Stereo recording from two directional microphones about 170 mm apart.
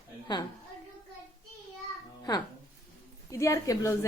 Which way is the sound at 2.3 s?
25° left (ahead or behind).